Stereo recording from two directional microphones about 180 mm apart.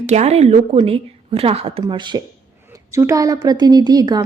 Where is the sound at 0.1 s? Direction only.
35° right (ahead or behind).